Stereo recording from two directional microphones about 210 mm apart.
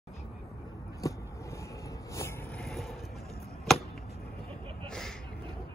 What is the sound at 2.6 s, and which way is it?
Vehicle, centre (ahead or behind).